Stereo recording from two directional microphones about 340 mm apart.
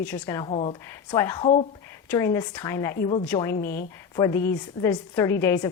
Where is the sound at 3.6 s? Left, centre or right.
Left.